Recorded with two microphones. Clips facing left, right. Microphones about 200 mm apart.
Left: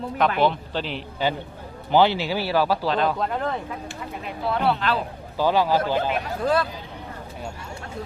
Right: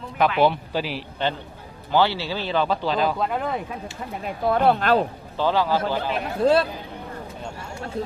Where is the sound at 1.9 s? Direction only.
15° left (ahead or behind); by 3.6 s 10° right (ahead or behind).